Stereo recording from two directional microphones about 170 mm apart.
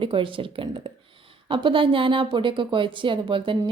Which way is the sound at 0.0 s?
30° right (ahead or behind).